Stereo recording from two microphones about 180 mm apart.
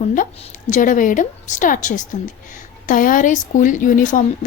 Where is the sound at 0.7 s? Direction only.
45° left (ahead or behind).